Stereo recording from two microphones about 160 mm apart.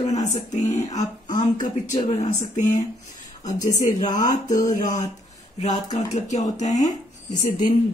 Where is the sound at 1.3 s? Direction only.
25° left (ahead or behind).